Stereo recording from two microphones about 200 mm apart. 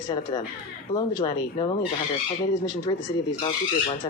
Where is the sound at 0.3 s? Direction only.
25° left (ahead or behind).